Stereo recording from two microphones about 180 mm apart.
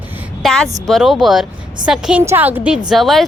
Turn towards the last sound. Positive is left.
turn(degrees=0)  # may be behind; listen again after turning